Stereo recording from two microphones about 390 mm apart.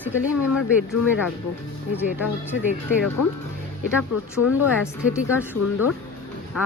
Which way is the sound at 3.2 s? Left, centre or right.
Left.